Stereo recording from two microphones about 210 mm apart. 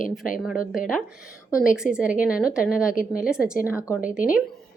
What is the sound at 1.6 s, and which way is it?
A woman's voice, 5° right (ahead or behind).